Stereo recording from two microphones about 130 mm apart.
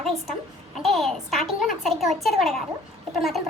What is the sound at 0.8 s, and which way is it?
A child's voice, centre (ahead or behind).